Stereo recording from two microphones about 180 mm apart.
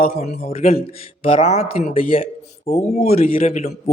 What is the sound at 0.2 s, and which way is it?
Speech, 35° left (ahead or behind).